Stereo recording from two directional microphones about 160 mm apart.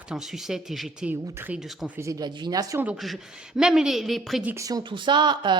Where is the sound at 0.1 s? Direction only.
Centre (ahead or behind).